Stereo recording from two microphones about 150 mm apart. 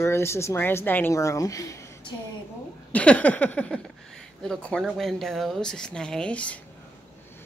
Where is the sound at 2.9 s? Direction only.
10° left (ahead or behind).